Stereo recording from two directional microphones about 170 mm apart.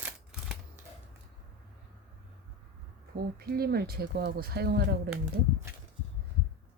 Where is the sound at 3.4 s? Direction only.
65° right (ahead or behind).